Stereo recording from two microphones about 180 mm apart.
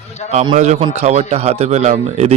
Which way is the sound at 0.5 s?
40° right (ahead or behind).